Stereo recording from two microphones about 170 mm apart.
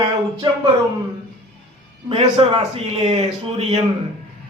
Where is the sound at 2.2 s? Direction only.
30° right (ahead or behind).